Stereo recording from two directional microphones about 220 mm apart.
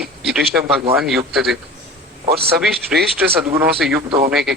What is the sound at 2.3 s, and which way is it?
Speech, 45° right (ahead or behind).